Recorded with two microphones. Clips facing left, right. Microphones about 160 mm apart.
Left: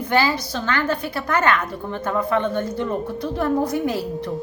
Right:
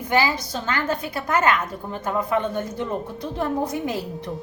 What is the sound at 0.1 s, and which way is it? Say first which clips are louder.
A woman's voice: left 1 dB; 20° right (ahead or behind).